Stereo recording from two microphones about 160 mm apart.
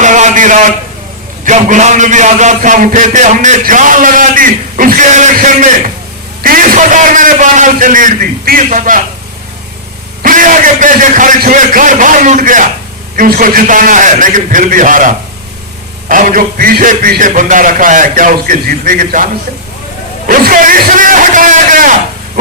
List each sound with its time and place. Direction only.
0.0 s a sound: 50° right (ahead or behind)
1.5 s a man's voice: 50° right (ahead or behind)
6.4 s a man's voice: 60° right (ahead or behind)
10.2 s a man's voice: 55° right (ahead or behind)